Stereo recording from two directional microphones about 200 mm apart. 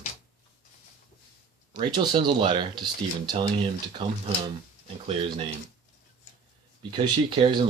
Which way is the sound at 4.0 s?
25° right (ahead or behind).